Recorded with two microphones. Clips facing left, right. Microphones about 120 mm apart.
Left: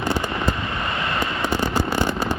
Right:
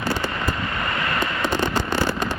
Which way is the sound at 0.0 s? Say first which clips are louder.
Left 2 dB; 20° left (ahead or behind).